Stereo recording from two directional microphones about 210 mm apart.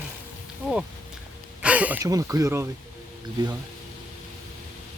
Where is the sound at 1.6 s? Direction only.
5° right (ahead or behind).